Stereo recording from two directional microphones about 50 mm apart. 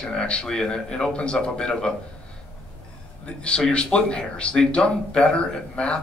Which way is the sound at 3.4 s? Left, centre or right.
Centre.